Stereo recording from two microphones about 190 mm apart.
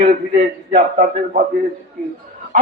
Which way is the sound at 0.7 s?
45° right (ahead or behind).